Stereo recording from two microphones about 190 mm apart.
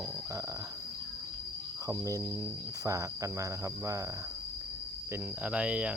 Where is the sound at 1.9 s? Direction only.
15° right (ahead or behind).